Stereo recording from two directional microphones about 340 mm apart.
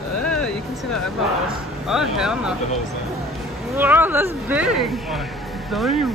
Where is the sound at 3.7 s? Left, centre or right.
Centre.